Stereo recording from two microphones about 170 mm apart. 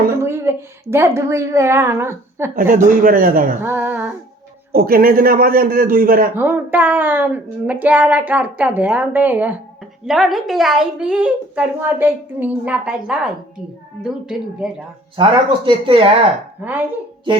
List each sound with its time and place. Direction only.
0.1 s a woman's voice: 15° right (ahead or behind)
2.6 s a man's voice: 50° right (ahead or behind)
3.6 s a woman's voice: 10° right (ahead or behind)
4.7 s a man's voice: 60° right (ahead or behind)
6.3 s a woman's voice: 10° right (ahead or behind)
15.1 s speech: 30° right (ahead or behind)